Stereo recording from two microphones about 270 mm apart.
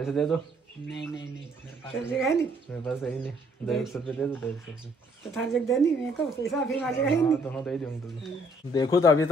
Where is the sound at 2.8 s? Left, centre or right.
Centre.